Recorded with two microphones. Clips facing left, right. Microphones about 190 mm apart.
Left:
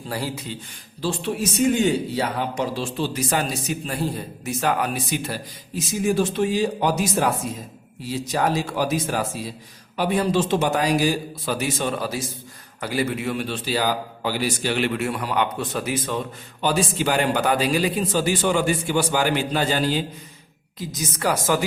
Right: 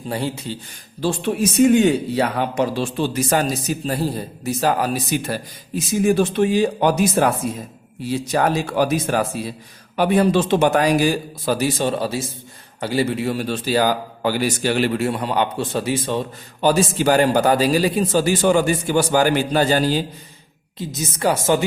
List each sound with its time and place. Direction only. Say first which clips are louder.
0.1 s a man's voice: right 4 dB; 25° right (ahead or behind)
1.7 s a man's voice: right 5 dB; 60° right (ahead or behind)
3.1 s a man's voice: right 5 dB; 45° right (ahead or behind)
6.1 s a man's voice: right 3 dB; 60° right (ahead or behind)
11.4 s a man's voice: right 5 dB; 35° right (ahead or behind)
20.7 s a man's voice: right 3 dB; 25° right (ahead or behind)